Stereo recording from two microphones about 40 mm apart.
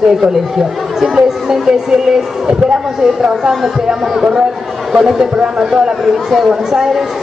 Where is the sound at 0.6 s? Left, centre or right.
Centre.